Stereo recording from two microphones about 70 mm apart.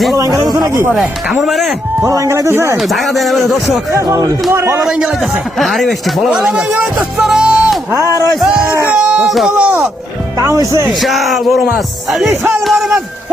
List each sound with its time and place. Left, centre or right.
0.2 s speech: right
1.3 s speech: centre
2.0 s speech: right
2.5 s speech: right
2.9 s speech: centre
3.9 s speech: right
5.5 s speech: centre
7.2 s music: centre
8.4 s speech: centre
9.2 s speech: centre
9.5 s speech: centre
10.4 s speech: right
10.8 s speech: centre